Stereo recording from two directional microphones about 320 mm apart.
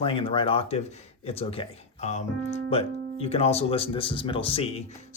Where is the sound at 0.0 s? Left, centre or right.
Centre.